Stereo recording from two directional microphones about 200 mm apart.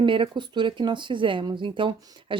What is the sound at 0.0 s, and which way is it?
Speech, 25° right (ahead or behind).